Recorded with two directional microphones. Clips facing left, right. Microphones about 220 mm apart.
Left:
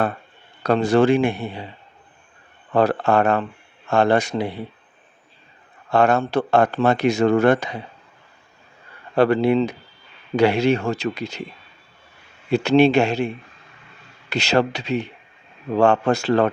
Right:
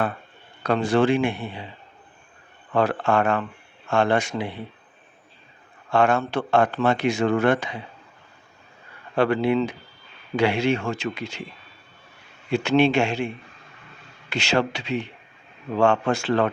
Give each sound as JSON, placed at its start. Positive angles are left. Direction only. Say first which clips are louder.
{"t": 0.6, "sound": "speech", "louder": "left 4 dB", "side_deg": 40}
{"t": 2.7, "sound": "speech", "louder": "left 3 dB", "side_deg": 40}
{"t": 5.9, "sound": "speech", "louder": "left 3 dB", "side_deg": 40}
{"t": 9.1, "sound": "speech", "louder": "left 4 dB", "side_deg": 40}
{"t": 12.5, "sound": "speech", "louder": "left 4 dB", "side_deg": 40}